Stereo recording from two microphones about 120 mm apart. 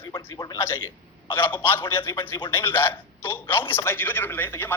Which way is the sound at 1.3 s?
15° left (ahead or behind).